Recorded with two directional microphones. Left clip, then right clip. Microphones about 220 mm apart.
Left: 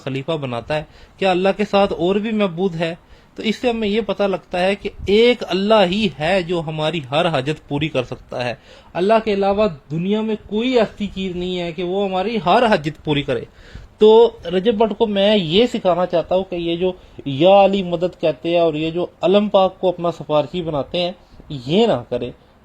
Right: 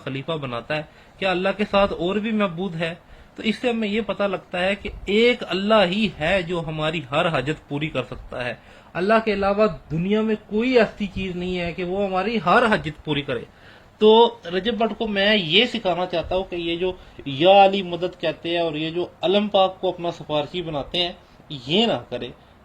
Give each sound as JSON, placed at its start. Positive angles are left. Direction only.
{"t": 0.0, "sound": "speech", "side_deg": 40}